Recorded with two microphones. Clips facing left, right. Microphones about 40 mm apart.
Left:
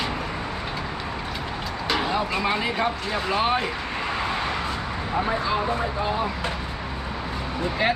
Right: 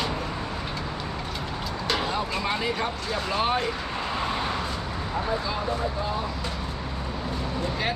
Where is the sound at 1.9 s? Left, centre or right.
Centre.